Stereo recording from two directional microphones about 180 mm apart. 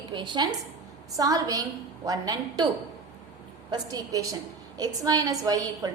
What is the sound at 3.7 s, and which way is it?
A woman's voice, 20° right (ahead or behind).